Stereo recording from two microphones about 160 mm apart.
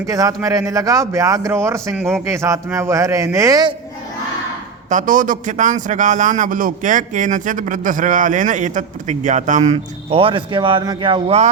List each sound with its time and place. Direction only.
0.0 s speech: 20° right (ahead or behind)
4.9 s a man's voice: 50° right (ahead or behind); by 11.3 s 30° right (ahead or behind)